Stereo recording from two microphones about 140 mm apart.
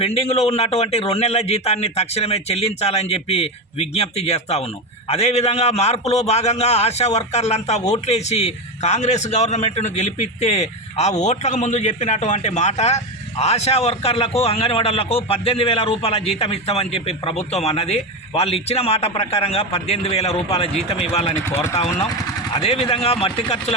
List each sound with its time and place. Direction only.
0.0 s a man's voice: 50° left (ahead or behind)
21.4 s speech: 20° left (ahead or behind)
22.5 s a man's voice: 45° left (ahead or behind)